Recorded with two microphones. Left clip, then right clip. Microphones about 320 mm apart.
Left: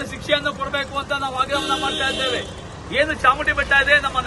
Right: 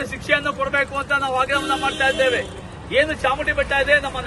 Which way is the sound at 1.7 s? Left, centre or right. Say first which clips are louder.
Right 2 dB; left.